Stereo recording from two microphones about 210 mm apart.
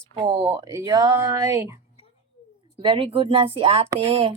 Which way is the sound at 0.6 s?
15° right (ahead or behind).